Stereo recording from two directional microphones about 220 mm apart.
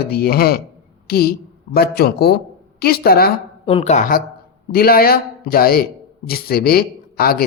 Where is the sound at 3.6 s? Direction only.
25° left (ahead or behind).